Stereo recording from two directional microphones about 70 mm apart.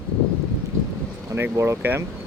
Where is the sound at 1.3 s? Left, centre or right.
Right.